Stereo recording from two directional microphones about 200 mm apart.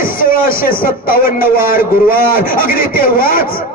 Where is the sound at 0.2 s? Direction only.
45° left (ahead or behind).